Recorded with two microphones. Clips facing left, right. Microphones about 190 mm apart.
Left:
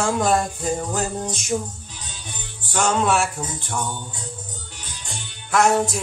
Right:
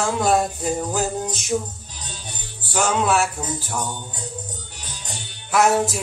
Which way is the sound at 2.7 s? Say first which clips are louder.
Even; 5° right (ahead or behind).